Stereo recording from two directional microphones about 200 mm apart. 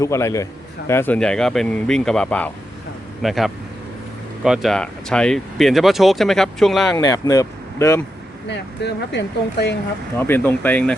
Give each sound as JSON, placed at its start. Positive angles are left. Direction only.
{"t": 0.0, "sound": "speech", "side_deg": 15}
{"t": 6.9, "sound": "speech", "side_deg": 20}
{"t": 8.4, "sound": "speech", "side_deg": 60}
{"t": 10.2, "sound": "speech", "side_deg": 10}